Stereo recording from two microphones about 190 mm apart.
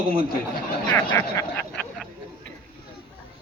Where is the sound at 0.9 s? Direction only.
10° left (ahead or behind).